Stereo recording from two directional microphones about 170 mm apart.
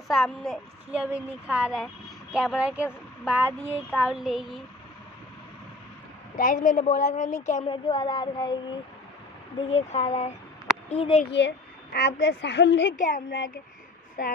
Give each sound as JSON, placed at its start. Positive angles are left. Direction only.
{"t": 0.1, "sound": "a woman's voice", "side_deg": 0}
{"t": 6.3, "sound": "a woman's voice", "side_deg": 55}
{"t": 7.6, "sound": "speech", "side_deg": 30}
{"t": 9.7, "sound": "speech", "side_deg": 40}
{"t": 11.3, "sound": "a woman's voice", "side_deg": 85}
{"t": 12.9, "sound": "a woman's voice", "side_deg": 50}